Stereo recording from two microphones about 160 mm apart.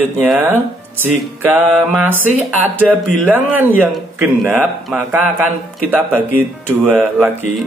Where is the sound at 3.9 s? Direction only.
Centre (ahead or behind).